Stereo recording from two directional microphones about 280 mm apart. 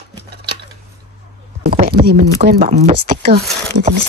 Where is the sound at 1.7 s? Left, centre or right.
Right.